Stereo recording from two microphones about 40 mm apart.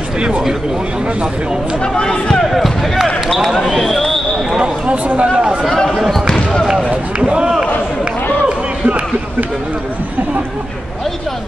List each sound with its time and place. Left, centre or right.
2.0 s speech: centre
3.6 s a sound: centre
4.6 s speech: right
6.2 s basketball bounce: centre
7.2 s speech: right
8.5 s a sound: right